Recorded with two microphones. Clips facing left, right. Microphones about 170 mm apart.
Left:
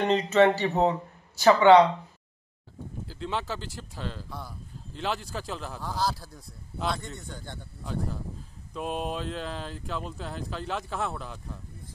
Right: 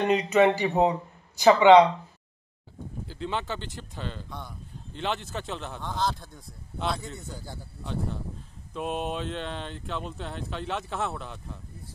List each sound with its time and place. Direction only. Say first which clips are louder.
0.0 s speech: even; 10° right (ahead or behind)
3.1 s speech: right 1 dB; centre (ahead or behind)